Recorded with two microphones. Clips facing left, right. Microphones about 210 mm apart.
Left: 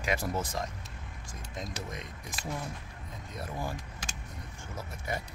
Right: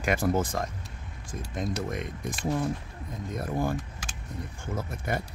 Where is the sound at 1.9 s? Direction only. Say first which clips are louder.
Right 9 dB; 55° right (ahead or behind).